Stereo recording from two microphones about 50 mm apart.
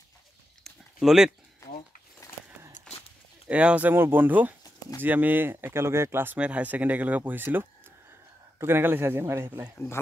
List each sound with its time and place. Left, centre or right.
1.0 s speech: centre
3.4 s speech: right
3.9 s speech: right
6.3 s speech: right